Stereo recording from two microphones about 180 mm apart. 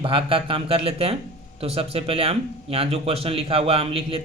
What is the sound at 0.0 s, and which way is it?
Speech, 30° right (ahead or behind).